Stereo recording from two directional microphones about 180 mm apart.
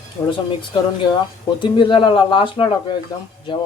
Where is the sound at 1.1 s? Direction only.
25° left (ahead or behind).